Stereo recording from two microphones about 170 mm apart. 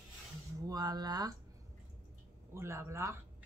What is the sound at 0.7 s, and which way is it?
Speech, 25° right (ahead or behind).